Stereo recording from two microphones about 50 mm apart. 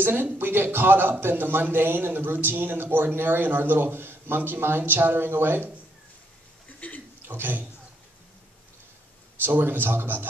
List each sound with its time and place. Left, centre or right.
0.0 s a man's voice: right
6.8 s a sound: left
7.2 s a man's voice: right
9.4 s a man's voice: right